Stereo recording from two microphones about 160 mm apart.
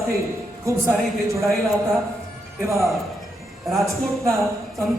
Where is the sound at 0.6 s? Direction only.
20° right (ahead or behind).